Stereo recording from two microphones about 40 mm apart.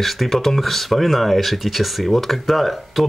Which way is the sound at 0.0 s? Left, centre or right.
Centre.